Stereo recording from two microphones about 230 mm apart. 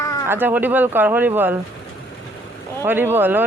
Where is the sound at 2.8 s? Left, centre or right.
Centre.